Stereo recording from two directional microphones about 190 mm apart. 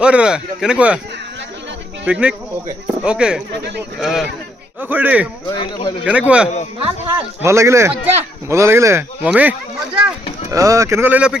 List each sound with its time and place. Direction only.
0.0 s speech: 5° right (ahead or behind)
2.0 s speech: 5° right (ahead or behind)
3.5 s speech: 65° right (ahead or behind)
4.0 s speech: centre (ahead or behind)
5.5 s speech: 20° left (ahead or behind)
6.1 s speech: 5° right (ahead or behind)